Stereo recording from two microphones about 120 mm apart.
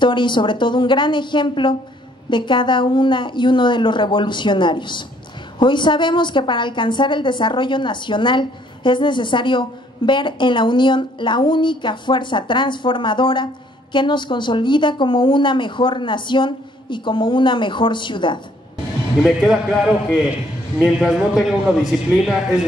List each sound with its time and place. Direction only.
0.0 s a woman's voice: 40° left (ahead or behind)
19.2 s a man's voice: 5° right (ahead or behind)
20.8 s a man's voice: 5° right (ahead or behind)